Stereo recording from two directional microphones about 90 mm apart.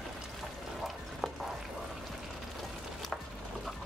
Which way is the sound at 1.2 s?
Centre (ahead or behind).